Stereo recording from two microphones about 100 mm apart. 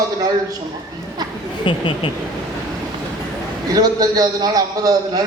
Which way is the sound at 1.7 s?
55° left (ahead or behind).